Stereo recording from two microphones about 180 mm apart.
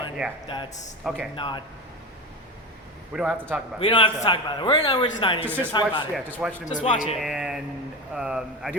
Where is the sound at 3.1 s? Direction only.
5° right (ahead or behind).